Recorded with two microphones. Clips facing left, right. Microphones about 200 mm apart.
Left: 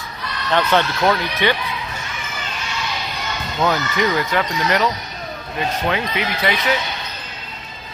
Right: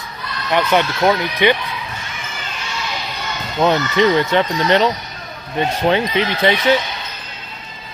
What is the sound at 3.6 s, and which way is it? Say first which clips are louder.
Speech: right 5 dB; 25° right (ahead or behind).